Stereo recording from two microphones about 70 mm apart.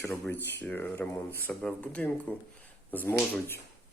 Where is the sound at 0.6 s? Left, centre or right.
Left.